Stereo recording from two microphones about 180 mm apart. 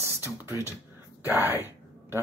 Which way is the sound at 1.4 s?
10° right (ahead or behind).